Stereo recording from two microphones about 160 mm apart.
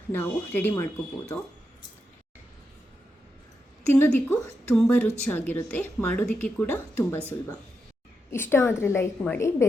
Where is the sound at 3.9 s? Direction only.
10° left (ahead or behind).